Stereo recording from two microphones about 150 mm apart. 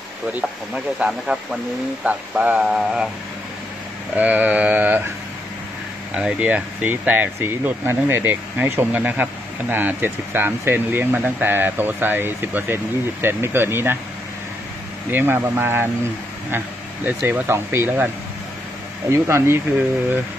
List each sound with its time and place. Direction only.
0.9 s speech: 5° right (ahead or behind)
4.2 s speech: 10° right (ahead or behind)
6.1 s speech: 10° right (ahead or behind)
15.0 s speech: 15° right (ahead or behind)